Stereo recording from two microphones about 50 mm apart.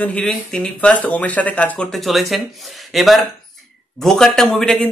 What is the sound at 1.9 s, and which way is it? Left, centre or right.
Speech, centre.